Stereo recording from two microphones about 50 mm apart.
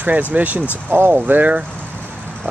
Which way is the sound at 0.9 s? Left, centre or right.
Right.